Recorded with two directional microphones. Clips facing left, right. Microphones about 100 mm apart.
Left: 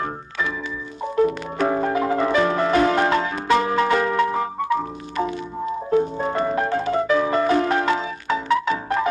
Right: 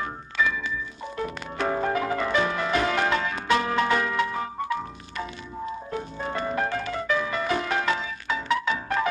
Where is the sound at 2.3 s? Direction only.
35° left (ahead or behind).